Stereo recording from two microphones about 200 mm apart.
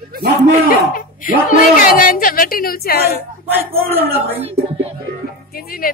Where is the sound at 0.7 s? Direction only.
45° left (ahead or behind).